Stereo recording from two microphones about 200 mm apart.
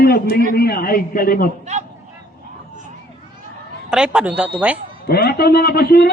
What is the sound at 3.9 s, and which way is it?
Speech, 5° right (ahead or behind).